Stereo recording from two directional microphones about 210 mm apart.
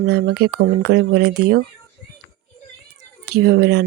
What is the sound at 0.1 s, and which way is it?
Speech, 50° right (ahead or behind).